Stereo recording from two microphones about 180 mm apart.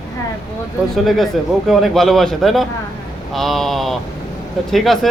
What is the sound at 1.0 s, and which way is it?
A man's voice, centre (ahead or behind).